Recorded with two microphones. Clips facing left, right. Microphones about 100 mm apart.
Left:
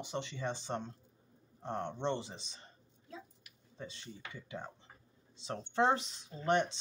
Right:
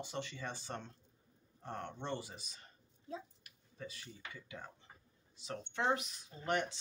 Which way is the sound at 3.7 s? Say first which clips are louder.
Left 2 dB; 25° left (ahead or behind).